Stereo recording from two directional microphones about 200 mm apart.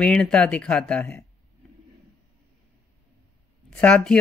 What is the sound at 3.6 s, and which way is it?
Speech, 5° left (ahead or behind).